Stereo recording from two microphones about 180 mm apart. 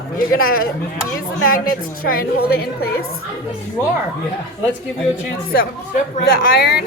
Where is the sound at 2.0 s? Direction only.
55° left (ahead or behind).